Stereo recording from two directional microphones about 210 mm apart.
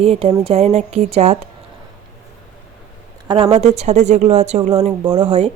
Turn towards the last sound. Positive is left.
turn(degrees=-25)  # may be behind; listen again after turning